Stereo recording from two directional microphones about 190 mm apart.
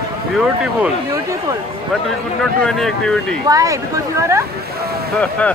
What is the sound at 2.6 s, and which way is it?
Speech, 5° left (ahead or behind).